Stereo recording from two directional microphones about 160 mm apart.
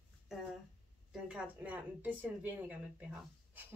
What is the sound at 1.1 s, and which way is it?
A woman's voice, 5° right (ahead or behind).